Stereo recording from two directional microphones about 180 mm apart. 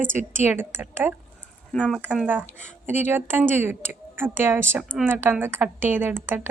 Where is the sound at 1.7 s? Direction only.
5° left (ahead or behind).